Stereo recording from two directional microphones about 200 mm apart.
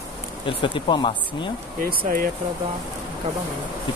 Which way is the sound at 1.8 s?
45° right (ahead or behind).